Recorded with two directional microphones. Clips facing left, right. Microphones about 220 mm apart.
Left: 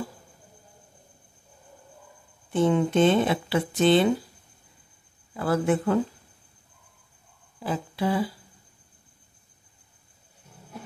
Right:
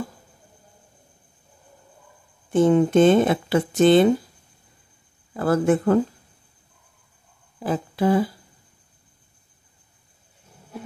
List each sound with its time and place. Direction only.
2.5 s speech: 45° right (ahead or behind)
5.3 s speech: 50° right (ahead or behind)
7.6 s speech: 45° right (ahead or behind)